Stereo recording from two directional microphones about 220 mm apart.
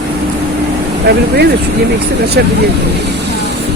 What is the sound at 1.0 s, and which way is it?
Speech, 50° right (ahead or behind).